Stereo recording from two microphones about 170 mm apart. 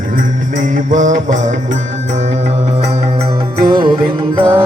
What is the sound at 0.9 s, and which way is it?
Music, 45° right (ahead or behind).